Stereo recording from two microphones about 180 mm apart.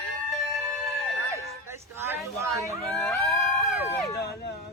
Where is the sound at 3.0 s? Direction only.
5° left (ahead or behind).